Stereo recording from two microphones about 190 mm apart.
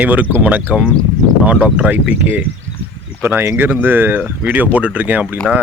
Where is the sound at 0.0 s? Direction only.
10° right (ahead or behind).